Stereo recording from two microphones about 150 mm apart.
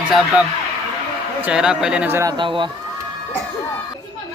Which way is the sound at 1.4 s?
5° right (ahead or behind).